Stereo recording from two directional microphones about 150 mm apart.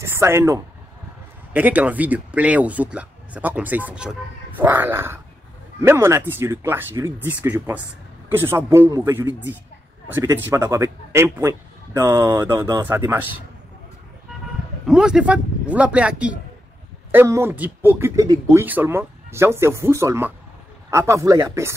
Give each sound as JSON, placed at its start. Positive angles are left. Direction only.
{"t": 0.0, "sound": "a man's voice", "side_deg": -15}
{"t": 14.9, "sound": "a man's voice", "side_deg": -5}